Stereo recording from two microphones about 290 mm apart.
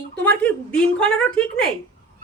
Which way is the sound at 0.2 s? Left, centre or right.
Centre.